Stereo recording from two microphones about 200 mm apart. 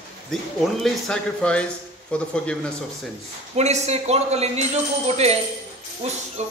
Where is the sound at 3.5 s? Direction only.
35° right (ahead or behind).